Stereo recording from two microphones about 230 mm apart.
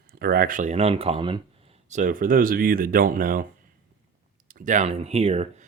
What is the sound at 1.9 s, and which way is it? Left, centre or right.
Speech, right.